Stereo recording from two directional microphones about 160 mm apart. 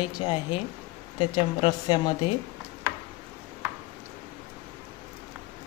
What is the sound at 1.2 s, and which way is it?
Speech, 30° left (ahead or behind).